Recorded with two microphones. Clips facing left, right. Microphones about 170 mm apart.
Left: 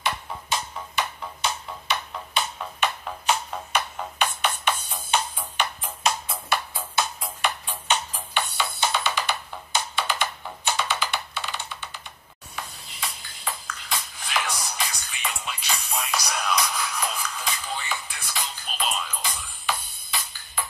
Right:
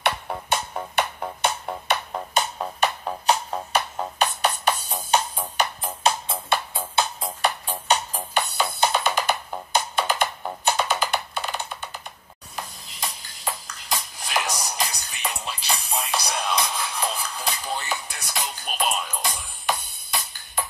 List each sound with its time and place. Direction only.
0.0 s music: 60° right (ahead or behind); by 20.6 s 45° right (ahead or behind)